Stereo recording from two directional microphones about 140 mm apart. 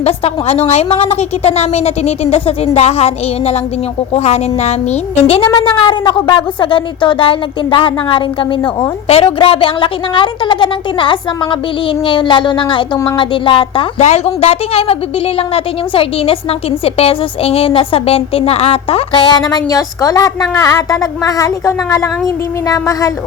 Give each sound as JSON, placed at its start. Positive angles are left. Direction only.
{"t": 0.0, "sound": "a woman's voice", "side_deg": 45}
{"t": 5.5, "sound": "speech", "side_deg": 35}
{"t": 14.0, "sound": "a woman's voice", "side_deg": 50}